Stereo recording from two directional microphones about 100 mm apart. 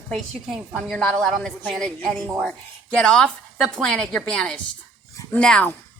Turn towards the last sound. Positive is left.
turn(degrees=10)  # may be behind; listen again after turning